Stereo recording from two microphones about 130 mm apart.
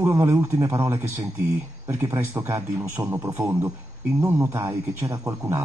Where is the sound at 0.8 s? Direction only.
15° right (ahead or behind).